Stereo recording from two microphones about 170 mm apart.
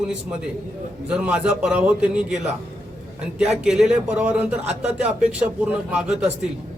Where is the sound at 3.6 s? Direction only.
5° right (ahead or behind).